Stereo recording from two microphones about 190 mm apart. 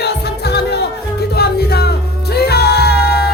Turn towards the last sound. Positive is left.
turn(degrees=55)  # may be behind; listen again after turning